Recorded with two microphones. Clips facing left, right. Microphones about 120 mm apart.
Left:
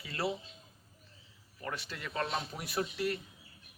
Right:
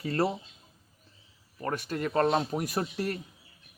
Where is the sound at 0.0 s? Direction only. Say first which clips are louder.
Right 7 dB; 45° right (ahead or behind).